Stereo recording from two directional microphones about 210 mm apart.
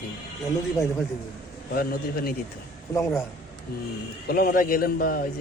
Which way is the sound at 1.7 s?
45° left (ahead or behind).